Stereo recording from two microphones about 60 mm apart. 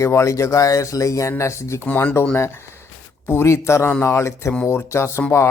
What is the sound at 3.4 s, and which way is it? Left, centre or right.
A man's voice, left.